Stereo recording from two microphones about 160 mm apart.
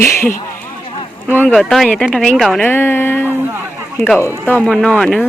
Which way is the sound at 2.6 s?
10° left (ahead or behind).